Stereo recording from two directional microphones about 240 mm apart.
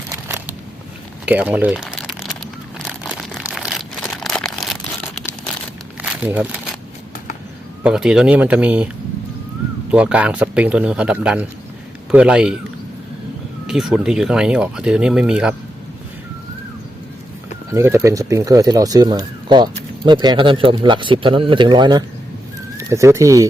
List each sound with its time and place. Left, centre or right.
0.3 s a sound: centre
1.2 s crumpling: centre
2.8 s a sound: centre
7.9 s speech: centre
9.9 s speech: centre
13.7 s speech: centre
17.7 s speech: centre